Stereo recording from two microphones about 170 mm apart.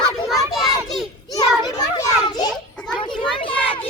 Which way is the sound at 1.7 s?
20° left (ahead or behind).